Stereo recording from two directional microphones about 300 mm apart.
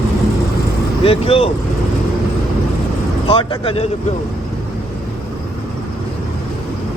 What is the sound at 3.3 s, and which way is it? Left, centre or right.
Speech, centre.